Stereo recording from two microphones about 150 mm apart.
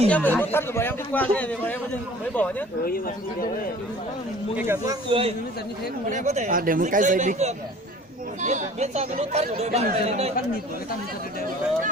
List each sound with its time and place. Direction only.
0.1 s a man's voice: 10° left (ahead or behind)
4.5 s speech: 15° right (ahead or behind)
5.0 s a man's voice: 35° right (ahead or behind)
6.1 s speech: 55° right (ahead or behind)